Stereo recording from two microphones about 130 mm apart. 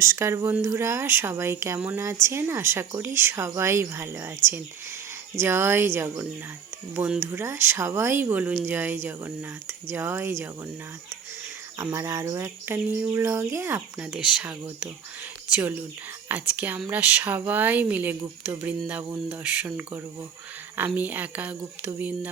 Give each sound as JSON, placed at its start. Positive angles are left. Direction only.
{"t": 0.0, "sound": "speech", "side_deg": -20}
{"t": 5.4, "sound": "speech", "side_deg": -20}
{"t": 11.8, "sound": "speech", "side_deg": -20}